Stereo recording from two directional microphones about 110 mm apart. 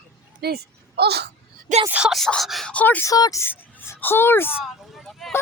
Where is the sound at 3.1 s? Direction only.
35° left (ahead or behind).